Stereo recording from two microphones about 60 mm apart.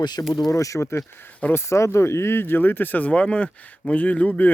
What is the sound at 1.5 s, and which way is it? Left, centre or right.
Speech, left.